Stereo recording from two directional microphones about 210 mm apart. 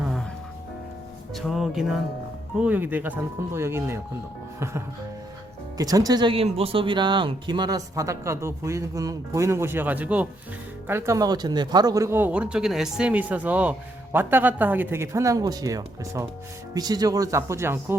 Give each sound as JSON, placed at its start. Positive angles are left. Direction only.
{"t": 1.4, "sound": "speech", "side_deg": 0}
{"t": 5.7, "sound": "speech", "side_deg": -15}